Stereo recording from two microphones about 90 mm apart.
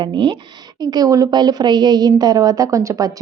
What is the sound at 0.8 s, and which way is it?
A woman's voice, 45° right (ahead or behind).